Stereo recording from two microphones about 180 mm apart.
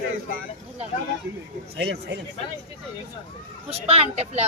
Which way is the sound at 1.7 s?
70° right (ahead or behind).